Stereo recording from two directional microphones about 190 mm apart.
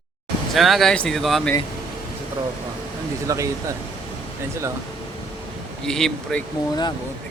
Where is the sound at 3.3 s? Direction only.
15° right (ahead or behind).